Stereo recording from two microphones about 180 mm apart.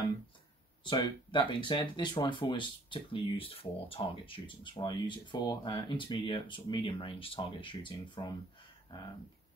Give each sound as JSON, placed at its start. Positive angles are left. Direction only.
{"t": 0.8, "sound": "speech", "side_deg": 25}